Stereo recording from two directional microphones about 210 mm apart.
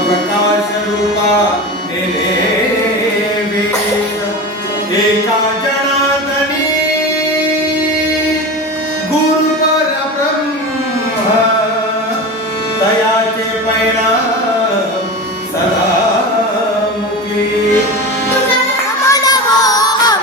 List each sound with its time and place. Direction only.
19.0 s child singing: 15° left (ahead or behind)